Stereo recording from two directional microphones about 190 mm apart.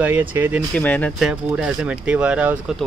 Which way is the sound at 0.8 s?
10° left (ahead or behind).